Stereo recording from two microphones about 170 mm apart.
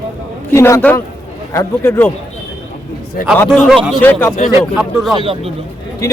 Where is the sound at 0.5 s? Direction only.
15° left (ahead or behind).